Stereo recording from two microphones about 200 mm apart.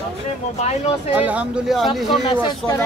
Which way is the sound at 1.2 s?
5° right (ahead or behind).